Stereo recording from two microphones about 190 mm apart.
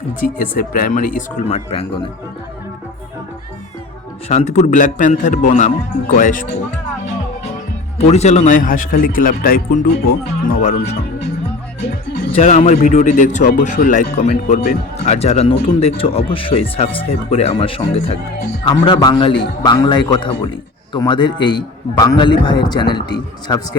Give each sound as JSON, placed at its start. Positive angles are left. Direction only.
{"t": 0.2, "sound": "a man's voice", "side_deg": 45}
{"t": 4.3, "sound": "a man's voice", "side_deg": 35}
{"t": 7.9, "sound": "a man's voice", "side_deg": 35}
{"t": 12.3, "sound": "a man's voice", "side_deg": 35}